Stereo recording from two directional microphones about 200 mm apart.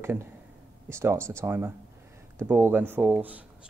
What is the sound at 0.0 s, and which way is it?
Speech, 10° right (ahead or behind).